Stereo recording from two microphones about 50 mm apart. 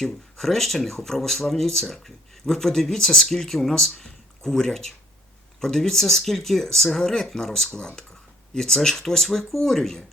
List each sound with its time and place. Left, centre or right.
0.0 s speech: centre